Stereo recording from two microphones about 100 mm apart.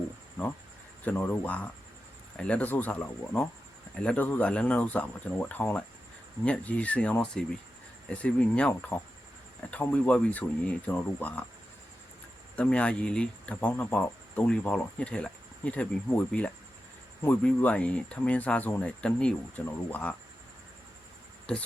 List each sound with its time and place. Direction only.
1.0 s speech: 20° left (ahead or behind)
12.5 s speech: 10° left (ahead or behind)